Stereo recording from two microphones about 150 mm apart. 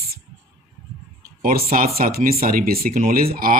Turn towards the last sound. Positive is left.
turn(degrees=-75)  # may be behind; listen again after turning